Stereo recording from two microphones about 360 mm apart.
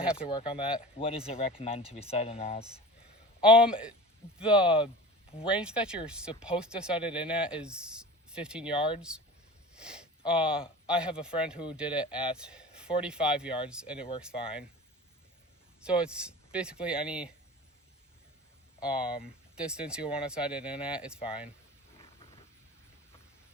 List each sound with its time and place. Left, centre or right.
0.0 s speech: centre
0.3 s speech: centre
3.6 s speech: centre
15.8 s speech: centre
18.8 s speech: centre